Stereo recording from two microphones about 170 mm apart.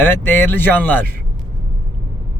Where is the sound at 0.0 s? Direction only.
10° left (ahead or behind).